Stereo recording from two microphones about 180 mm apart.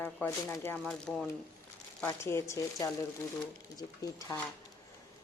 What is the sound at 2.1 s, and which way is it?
Speech, 15° left (ahead or behind).